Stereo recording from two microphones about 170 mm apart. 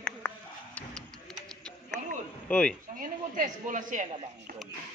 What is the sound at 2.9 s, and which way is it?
Speech, 50° right (ahead or behind).